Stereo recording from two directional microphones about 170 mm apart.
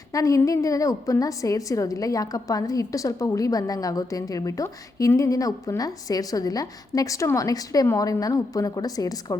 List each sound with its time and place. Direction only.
0.1 s a woman's voice: 20° left (ahead or behind)